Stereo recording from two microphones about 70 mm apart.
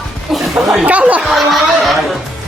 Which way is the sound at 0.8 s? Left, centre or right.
Right.